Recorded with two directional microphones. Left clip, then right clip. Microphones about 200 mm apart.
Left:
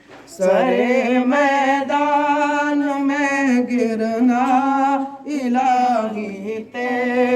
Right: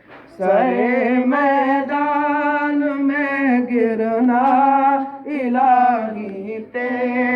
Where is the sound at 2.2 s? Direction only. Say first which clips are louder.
Left 1 dB; 65° left (ahead or behind); by 4.4 s 45° left (ahead or behind).